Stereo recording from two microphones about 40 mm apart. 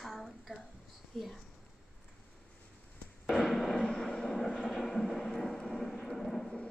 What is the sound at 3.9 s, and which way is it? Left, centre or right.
Vehicle, centre.